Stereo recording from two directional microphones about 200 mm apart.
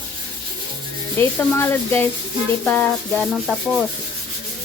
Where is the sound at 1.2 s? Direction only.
10° left (ahead or behind).